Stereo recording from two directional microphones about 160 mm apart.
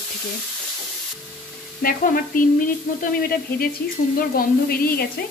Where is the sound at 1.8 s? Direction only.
60° left (ahead or behind).